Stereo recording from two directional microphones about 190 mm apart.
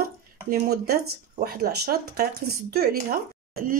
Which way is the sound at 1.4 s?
55° right (ahead or behind).